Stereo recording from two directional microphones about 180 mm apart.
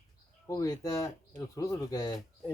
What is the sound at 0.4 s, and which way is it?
Speech, 20° left (ahead or behind).